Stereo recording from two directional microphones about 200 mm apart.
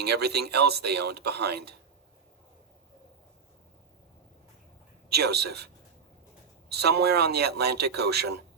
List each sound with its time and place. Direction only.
0.0 s speech: 55° right (ahead or behind)
5.0 s speech: 55° right (ahead or behind)
6.7 s speech: 55° right (ahead or behind)